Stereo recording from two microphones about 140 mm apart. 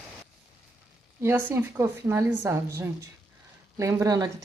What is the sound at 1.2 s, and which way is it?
A woman's voice, 15° right (ahead or behind).